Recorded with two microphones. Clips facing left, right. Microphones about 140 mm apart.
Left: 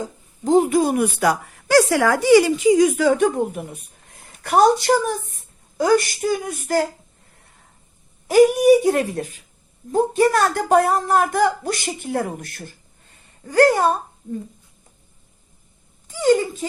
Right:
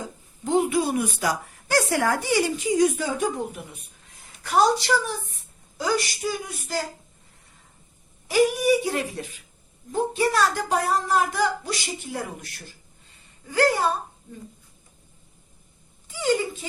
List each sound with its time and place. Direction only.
0.4 s a woman's voice: 40° left (ahead or behind); by 6.8 s 55° left (ahead or behind)
8.3 s a woman's voice: 50° left (ahead or behind)